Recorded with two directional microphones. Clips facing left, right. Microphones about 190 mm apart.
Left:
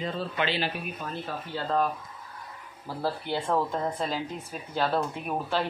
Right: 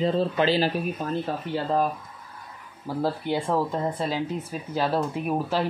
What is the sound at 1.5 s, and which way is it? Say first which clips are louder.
Speech: right 2 dB; 20° right (ahead or behind).